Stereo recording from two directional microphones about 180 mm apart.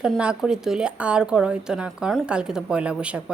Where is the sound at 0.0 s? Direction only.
5° right (ahead or behind).